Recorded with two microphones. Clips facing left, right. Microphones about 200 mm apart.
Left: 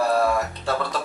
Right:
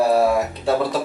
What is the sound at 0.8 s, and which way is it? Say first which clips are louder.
Music: right 6 dB; 5° right (ahead or behind).